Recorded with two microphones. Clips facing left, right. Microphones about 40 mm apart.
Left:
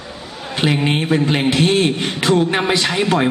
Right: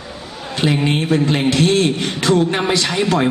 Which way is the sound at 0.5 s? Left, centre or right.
Centre.